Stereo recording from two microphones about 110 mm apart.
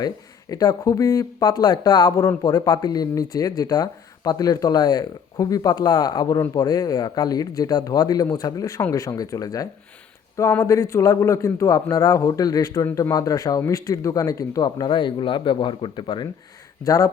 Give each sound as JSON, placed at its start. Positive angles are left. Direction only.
{"t": 0.5, "sound": "speech", "side_deg": 30}
{"t": 16.8, "sound": "speech", "side_deg": 30}